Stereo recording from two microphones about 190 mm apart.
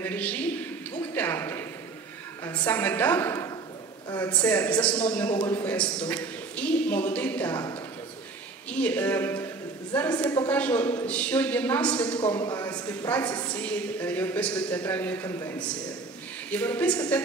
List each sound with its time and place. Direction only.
0.0 s a woman's voice: 10° left (ahead or behind)
8.6 s a man's voice: 5° left (ahead or behind)
12.2 s a man's voice: 20° left (ahead or behind)